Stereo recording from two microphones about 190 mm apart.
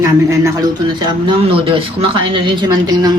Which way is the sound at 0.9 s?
30° right (ahead or behind).